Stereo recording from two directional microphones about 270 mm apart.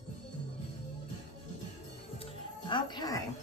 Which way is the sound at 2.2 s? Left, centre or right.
Centre.